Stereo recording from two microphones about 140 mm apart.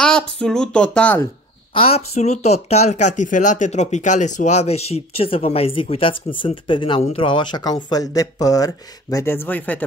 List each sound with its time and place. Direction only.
0.0 s speech: 5° left (ahead or behind)
1.7 s speech: 45° left (ahead or behind)
7.0 s speech: 50° left (ahead or behind)
7.2 s speech: 30° left (ahead or behind); by 9.8 s 10° left (ahead or behind)